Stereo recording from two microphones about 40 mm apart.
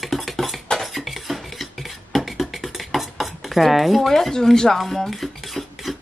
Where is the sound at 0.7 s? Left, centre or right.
Centre.